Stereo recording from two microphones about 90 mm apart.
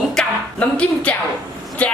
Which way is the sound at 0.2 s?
10° left (ahead or behind).